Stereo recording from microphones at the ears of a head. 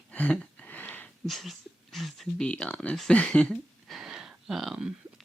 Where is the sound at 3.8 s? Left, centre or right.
Right.